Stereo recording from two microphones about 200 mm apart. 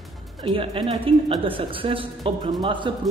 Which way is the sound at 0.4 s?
25° right (ahead or behind).